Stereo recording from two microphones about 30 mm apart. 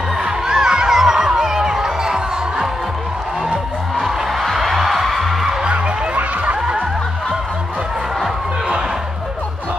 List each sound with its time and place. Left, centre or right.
0.5 s music: right
4.0 s music: centre
6.1 s a sound: right